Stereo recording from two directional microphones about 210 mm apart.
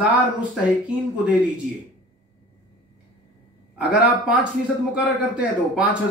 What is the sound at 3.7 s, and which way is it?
A man's voice, 5° right (ahead or behind).